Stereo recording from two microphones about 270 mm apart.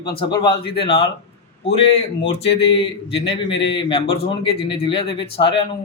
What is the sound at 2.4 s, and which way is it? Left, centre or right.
A man's voice, left.